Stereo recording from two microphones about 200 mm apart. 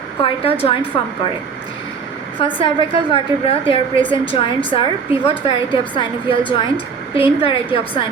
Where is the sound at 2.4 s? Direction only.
25° left (ahead or behind).